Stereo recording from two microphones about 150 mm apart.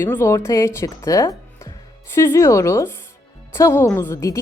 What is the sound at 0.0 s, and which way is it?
A woman's voice, 15° left (ahead or behind).